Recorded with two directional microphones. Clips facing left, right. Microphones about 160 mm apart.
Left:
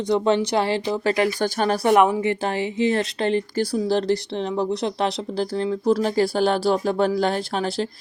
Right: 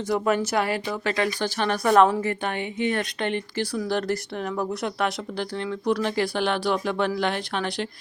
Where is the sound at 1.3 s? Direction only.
45° left (ahead or behind).